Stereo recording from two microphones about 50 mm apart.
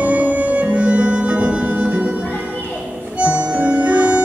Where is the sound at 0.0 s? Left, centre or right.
Right.